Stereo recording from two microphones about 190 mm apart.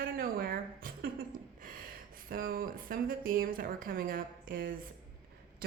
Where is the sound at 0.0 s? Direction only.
50° right (ahead or behind).